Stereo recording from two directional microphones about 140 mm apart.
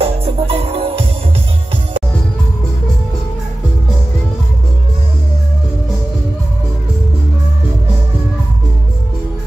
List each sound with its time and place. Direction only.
0.0 s music: 40° right (ahead or behind)